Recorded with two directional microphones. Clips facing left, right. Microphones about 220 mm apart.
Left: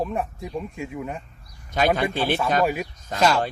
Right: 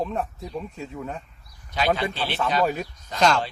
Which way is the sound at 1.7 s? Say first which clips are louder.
Left 3 dB; 50° left (ahead or behind).